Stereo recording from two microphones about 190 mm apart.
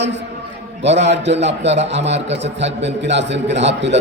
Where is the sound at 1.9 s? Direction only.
70° right (ahead or behind).